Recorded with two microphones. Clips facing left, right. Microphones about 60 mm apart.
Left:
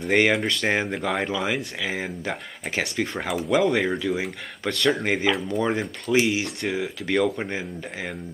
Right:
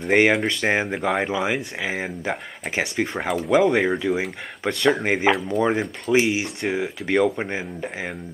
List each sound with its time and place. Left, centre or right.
0.1 s speech: centre
5.3 s speech: right
5.6 s speech: centre